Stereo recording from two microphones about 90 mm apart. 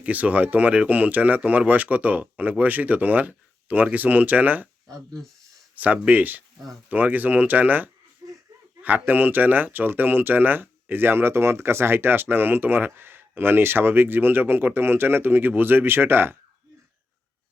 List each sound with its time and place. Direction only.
0.0 s speech: 15° right (ahead or behind)
5.7 s speech: 15° right (ahead or behind)
8.2 s a sound: 40° right (ahead or behind)
8.8 s speech: 20° right (ahead or behind)